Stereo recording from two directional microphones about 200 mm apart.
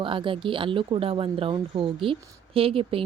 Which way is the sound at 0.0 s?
25° right (ahead or behind).